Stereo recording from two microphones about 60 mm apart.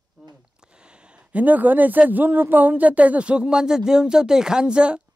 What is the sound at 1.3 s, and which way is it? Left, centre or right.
Speech, right.